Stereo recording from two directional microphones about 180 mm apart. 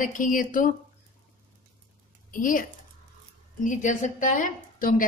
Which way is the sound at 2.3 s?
50° left (ahead or behind).